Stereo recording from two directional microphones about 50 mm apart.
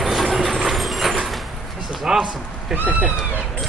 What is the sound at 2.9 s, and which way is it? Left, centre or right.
Cat, right.